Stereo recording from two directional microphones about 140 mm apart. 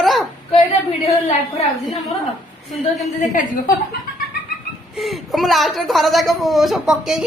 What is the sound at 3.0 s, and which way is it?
Speech, 65° left (ahead or behind).